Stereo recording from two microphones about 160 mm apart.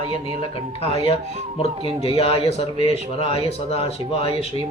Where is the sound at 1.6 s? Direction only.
40° left (ahead or behind).